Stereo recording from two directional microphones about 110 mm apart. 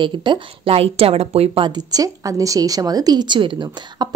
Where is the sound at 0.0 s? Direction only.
45° right (ahead or behind); by 1.7 s 65° right (ahead or behind).